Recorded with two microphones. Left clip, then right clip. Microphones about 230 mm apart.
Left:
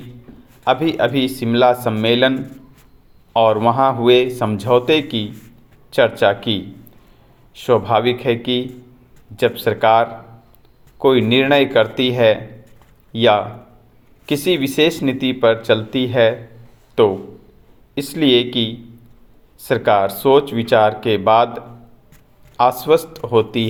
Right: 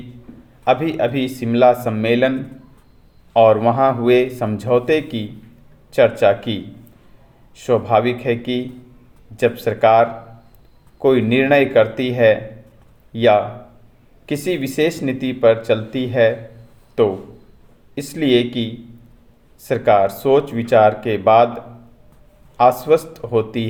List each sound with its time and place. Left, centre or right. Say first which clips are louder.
0.6 s speech: left 1 dB; centre
3.3 s speech: right 1 dB; centre